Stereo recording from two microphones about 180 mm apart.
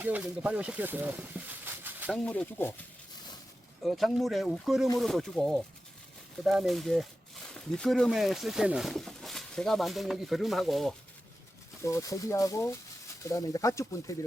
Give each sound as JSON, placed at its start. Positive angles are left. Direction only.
{"t": 0.0, "sound": "speech", "side_deg": -10}
{"t": 2.2, "sound": "speech", "side_deg": 5}
{"t": 3.8, "sound": "speech", "side_deg": 0}
{"t": 11.8, "sound": "speech", "side_deg": 15}